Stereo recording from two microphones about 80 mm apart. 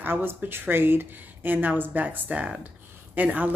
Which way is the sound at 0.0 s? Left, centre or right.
Right.